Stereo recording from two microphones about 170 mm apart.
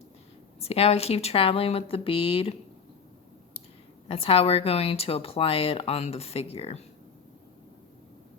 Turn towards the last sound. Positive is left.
turn(degrees=35)  # may be behind; listen again after turning